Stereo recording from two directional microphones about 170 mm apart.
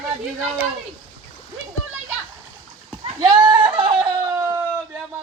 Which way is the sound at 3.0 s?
25° right (ahead or behind).